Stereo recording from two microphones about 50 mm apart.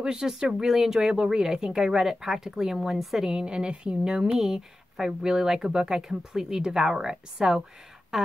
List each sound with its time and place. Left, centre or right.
0.0 s speech: centre
1.0 s speech: centre
3.3 s speech: centre